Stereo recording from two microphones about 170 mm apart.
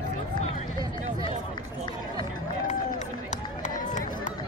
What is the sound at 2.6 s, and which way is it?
Run, 45° left (ahead or behind).